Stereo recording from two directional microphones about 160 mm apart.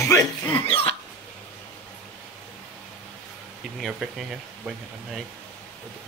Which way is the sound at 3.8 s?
Centre (ahead or behind).